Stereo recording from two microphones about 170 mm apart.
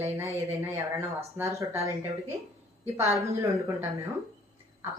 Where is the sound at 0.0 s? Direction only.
15° right (ahead or behind).